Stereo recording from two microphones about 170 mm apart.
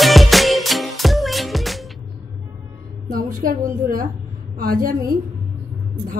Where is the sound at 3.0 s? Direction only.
55° right (ahead or behind).